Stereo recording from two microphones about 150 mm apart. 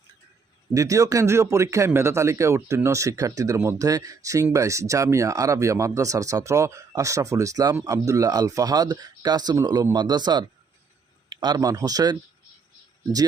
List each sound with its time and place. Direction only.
0.7 s speech: 20° right (ahead or behind)